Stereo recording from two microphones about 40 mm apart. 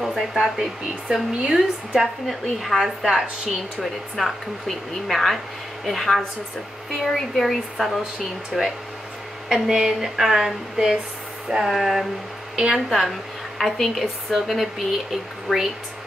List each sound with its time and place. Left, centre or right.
0.0 s speech: centre
2.6 s speech: centre